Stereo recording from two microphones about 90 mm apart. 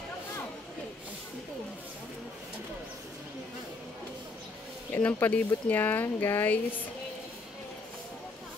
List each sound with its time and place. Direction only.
4.9 s speech: 15° left (ahead or behind)